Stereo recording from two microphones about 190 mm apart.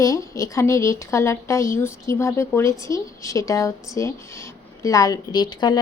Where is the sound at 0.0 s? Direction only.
15° left (ahead or behind).